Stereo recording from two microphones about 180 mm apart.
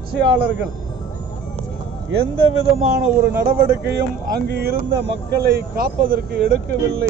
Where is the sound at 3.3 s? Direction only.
15° right (ahead or behind).